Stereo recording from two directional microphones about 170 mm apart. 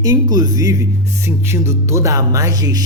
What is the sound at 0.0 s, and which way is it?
A man's voice, 20° right (ahead or behind).